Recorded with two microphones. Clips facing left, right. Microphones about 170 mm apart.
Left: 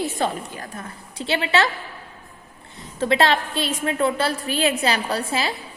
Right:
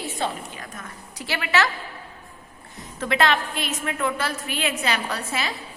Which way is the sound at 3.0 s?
30° left (ahead or behind).